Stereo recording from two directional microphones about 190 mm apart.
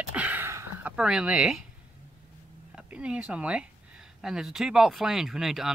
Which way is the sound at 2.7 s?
5° right (ahead or behind).